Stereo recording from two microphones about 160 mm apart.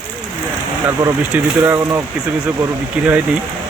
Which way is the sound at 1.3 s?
10° right (ahead or behind).